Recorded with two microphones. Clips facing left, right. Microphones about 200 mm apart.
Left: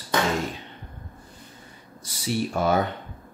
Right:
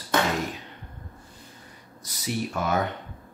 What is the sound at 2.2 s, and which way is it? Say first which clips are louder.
Speech: left 3 dB; 30° left (ahead or behind).